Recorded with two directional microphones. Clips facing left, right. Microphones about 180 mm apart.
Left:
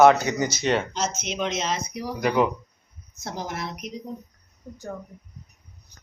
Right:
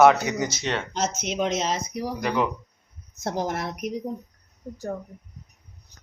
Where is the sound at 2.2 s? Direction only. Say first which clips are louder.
Left 4 dB; 5° left (ahead or behind).